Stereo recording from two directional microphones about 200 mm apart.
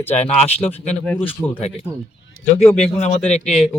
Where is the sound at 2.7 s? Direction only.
35° left (ahead or behind).